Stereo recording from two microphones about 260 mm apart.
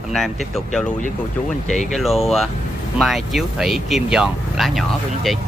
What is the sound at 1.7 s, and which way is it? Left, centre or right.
Speech, left.